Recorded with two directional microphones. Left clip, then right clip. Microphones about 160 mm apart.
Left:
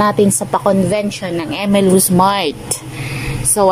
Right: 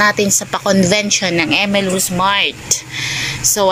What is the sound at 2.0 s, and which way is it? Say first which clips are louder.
Speech: left 1 dB; 30° left (ahead or behind).